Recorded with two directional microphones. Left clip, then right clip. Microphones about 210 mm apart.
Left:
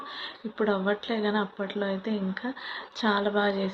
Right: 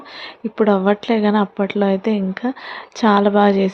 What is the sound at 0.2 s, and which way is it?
Speech, 45° right (ahead or behind).